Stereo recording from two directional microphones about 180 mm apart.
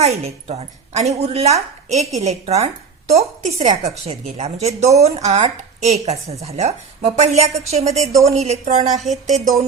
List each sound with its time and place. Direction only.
0.0 s a woman's voice: 35° right (ahead or behind)